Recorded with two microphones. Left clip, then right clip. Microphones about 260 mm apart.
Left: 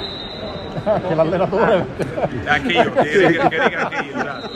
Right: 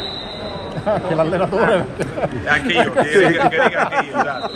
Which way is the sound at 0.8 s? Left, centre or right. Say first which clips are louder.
Left 1 dB; right.